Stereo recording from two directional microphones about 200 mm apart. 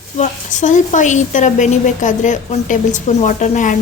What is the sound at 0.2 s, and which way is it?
A woman's voice, 40° left (ahead or behind).